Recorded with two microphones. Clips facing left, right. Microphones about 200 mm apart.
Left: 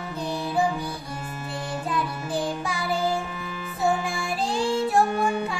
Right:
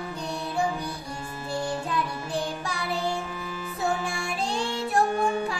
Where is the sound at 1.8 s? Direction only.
Centre (ahead or behind).